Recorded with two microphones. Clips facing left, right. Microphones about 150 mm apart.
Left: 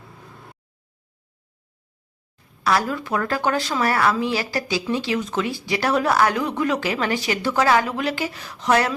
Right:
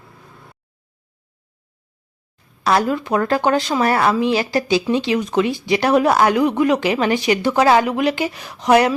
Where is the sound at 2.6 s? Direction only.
25° right (ahead or behind).